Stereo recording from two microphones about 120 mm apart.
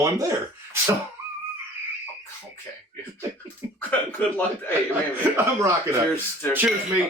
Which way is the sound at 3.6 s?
20° right (ahead or behind).